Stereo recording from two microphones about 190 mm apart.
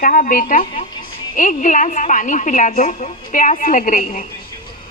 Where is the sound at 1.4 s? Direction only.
45° left (ahead or behind).